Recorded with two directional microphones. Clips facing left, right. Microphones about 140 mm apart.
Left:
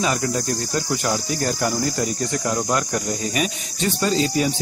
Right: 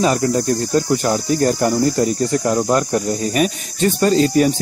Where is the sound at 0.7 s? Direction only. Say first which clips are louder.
Right 6 dB; 35° right (ahead or behind).